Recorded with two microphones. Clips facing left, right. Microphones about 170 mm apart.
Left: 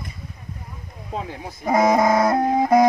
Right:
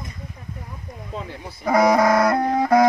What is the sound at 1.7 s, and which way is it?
Music, 20° left (ahead or behind).